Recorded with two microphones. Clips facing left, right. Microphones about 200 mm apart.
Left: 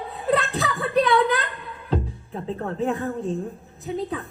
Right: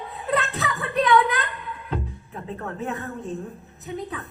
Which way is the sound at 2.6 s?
30° left (ahead or behind).